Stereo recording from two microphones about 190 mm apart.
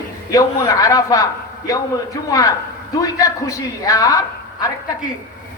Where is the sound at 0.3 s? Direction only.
20° left (ahead or behind).